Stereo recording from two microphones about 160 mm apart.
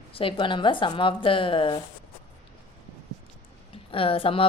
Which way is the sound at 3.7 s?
35° left (ahead or behind).